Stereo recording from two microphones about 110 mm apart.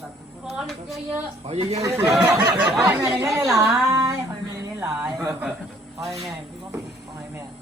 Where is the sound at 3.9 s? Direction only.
30° right (ahead or behind).